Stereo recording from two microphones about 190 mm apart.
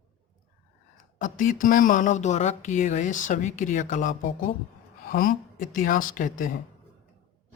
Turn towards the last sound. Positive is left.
turn(degrees=45)  # may be behind; listen again after turning